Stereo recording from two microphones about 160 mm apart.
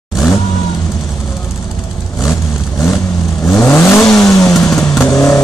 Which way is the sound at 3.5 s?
15° left (ahead or behind).